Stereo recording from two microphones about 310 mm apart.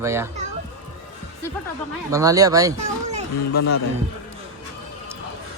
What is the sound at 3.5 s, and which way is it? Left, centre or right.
Speech, left.